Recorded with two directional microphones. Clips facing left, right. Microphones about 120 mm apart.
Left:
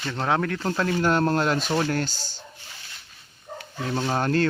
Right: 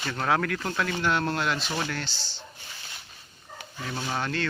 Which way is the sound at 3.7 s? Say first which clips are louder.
Left 6 dB; 40° left (ahead or behind).